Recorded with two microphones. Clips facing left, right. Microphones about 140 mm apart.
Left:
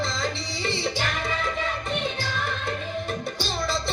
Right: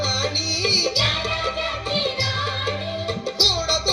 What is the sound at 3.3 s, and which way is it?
Music, 90° right.